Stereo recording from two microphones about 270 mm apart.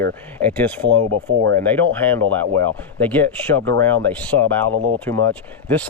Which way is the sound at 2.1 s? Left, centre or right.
Centre.